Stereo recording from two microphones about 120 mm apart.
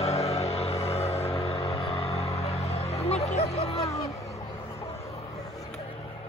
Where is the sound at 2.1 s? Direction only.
65° left (ahead or behind).